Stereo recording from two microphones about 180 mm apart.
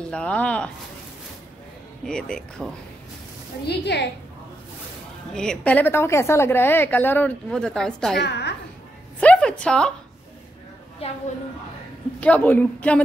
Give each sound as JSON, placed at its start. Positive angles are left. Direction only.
{"t": 0.0, "sound": "a woman's voice", "side_deg": 5}
{"t": 2.0, "sound": "speech", "side_deg": 5}
{"t": 3.6, "sound": "a woman's voice", "side_deg": 70}
{"t": 5.3, "sound": "a woman's voice", "side_deg": 5}
{"t": 8.2, "sound": "a woman's voice", "side_deg": 70}
{"t": 9.2, "sound": "a sound", "side_deg": 5}
{"t": 12.2, "sound": "a woman's voice", "side_deg": 10}